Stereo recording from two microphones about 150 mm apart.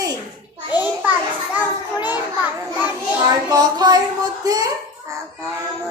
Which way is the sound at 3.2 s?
25° right (ahead or behind).